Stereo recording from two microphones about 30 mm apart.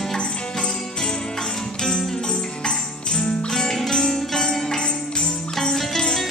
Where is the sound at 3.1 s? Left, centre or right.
Left.